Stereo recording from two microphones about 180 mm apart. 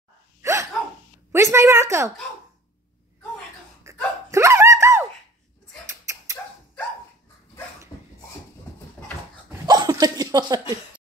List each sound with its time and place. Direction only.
0.4 s dog: 15° right (ahead or behind)
1.3 s a woman's voice: 15° right (ahead or behind)
3.8 s hiccup: 15° right (ahead or behind)
5.9 s dog: 15° right (ahead or behind)
7.9 s beatboxing: 15° left (ahead or behind)
9.7 s a sound: 20° right (ahead or behind)